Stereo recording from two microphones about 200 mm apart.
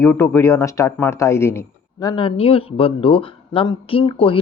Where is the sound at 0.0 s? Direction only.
10° left (ahead or behind).